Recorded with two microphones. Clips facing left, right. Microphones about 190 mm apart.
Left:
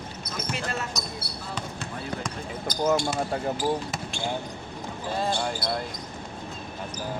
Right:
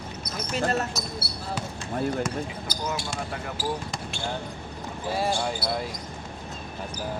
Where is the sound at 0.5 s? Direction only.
40° right (ahead or behind).